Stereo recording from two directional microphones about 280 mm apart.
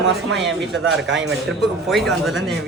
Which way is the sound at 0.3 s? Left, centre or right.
Centre.